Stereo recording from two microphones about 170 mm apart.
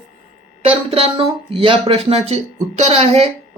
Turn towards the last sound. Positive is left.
turn(degrees=-35)  # may be behind; listen again after turning